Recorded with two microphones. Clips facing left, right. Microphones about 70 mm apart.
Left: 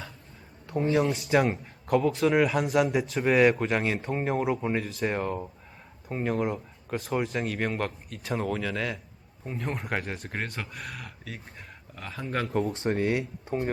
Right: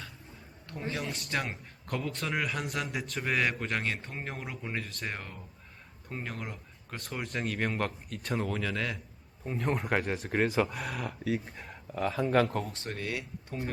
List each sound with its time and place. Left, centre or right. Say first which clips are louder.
0.7 s speech: left 11 dB; centre
13.0 s speech: left 8 dB; left